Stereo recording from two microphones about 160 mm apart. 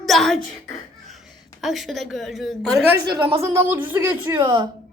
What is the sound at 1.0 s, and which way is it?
A woman's voice, centre (ahead or behind).